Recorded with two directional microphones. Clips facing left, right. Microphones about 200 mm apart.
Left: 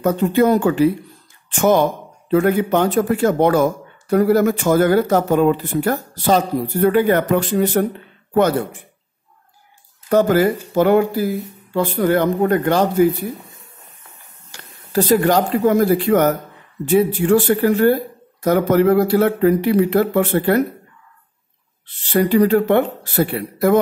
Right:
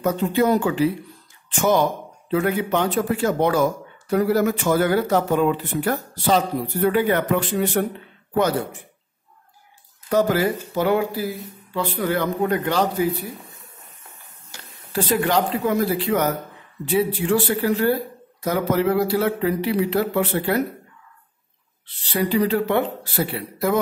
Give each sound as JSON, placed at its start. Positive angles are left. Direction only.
{"t": 0.0, "sound": "speech", "side_deg": 55}
{"t": 10.0, "sound": "speech", "side_deg": 50}
{"t": 14.9, "sound": "speech", "side_deg": 40}
{"t": 22.1, "sound": "speech", "side_deg": 50}